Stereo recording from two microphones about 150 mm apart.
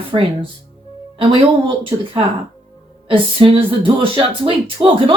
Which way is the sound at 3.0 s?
35° right (ahead or behind).